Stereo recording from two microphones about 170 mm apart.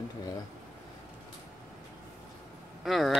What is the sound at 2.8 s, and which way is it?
Speech, centre (ahead or behind).